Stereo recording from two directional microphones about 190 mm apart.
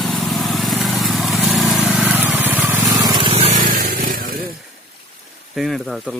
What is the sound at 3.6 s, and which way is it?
Vehicle, 45° right (ahead or behind).